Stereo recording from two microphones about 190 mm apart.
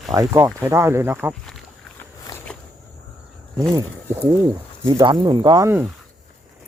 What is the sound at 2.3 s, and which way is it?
Walk, 20° left (ahead or behind).